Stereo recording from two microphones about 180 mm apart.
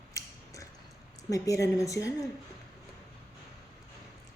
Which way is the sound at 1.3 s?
20° left (ahead or behind).